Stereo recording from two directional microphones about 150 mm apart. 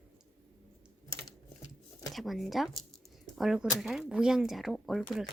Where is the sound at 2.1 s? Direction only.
Centre (ahead or behind).